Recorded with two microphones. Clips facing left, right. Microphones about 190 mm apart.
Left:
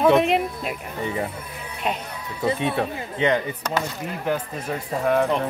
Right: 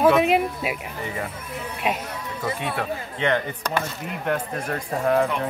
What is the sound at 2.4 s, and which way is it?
Speech, 25° left (ahead or behind).